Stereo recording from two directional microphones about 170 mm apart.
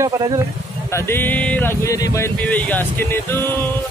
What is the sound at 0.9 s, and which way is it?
Speech, 15° left (ahead or behind).